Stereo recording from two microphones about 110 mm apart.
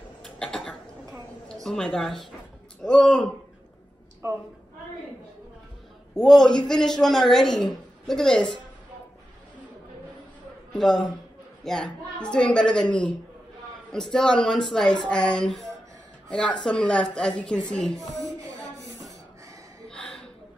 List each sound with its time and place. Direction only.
0.2 s cough: 5° left (ahead or behind)
1.5 s a woman's voice: 5° left (ahead or behind)
4.2 s a woman's voice: 25° right (ahead or behind)
6.1 s a man's voice: 5° left (ahead or behind)
10.7 s a man's voice: centre (ahead or behind)
18.9 s a sound: 30° right (ahead or behind)
19.9 s a sound: 5° left (ahead or behind)